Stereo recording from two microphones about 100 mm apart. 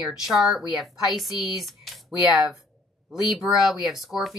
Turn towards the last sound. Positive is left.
turn(degrees=0)  # may be behind; listen again after turning